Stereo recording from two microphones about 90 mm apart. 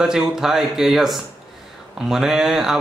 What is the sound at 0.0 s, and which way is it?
Speech, 5° right (ahead or behind).